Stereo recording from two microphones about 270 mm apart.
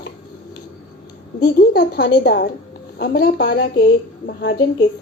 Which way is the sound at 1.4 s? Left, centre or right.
Left.